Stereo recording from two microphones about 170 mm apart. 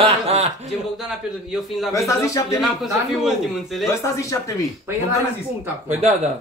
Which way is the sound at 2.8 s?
Centre (ahead or behind).